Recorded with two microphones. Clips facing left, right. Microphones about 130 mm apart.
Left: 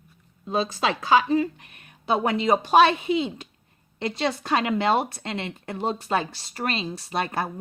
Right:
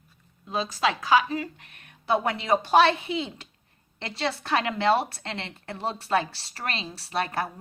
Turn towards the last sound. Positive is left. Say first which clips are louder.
# left 1 dB
turn(degrees=20)  # may be behind; listen again after turning